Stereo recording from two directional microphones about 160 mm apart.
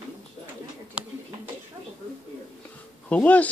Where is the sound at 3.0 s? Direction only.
10° left (ahead or behind).